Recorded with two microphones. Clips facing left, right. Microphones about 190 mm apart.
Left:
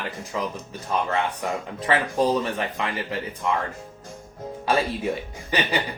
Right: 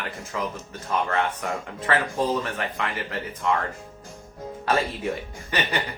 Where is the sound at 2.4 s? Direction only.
15° left (ahead or behind).